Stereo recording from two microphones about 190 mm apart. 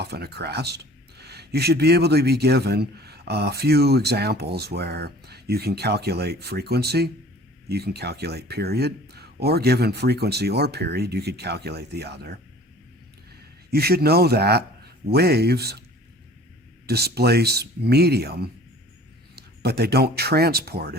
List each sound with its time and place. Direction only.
0.0 s speech: 60° right (ahead or behind)
13.7 s speech: 55° right (ahead or behind)
16.8 s speech: 55° right (ahead or behind)